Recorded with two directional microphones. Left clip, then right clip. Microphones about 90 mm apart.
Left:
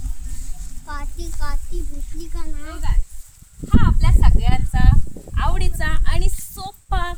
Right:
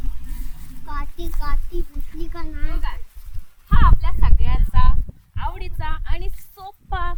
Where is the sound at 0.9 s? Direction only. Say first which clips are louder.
Right 1 dB; 10° left (ahead or behind).